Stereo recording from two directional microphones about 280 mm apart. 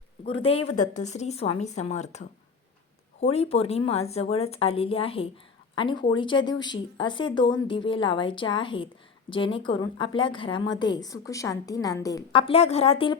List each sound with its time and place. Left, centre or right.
0.3 s speech: left